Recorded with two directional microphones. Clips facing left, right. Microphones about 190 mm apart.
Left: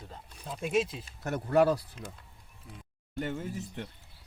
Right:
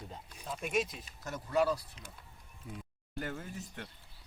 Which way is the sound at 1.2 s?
60° left (ahead or behind).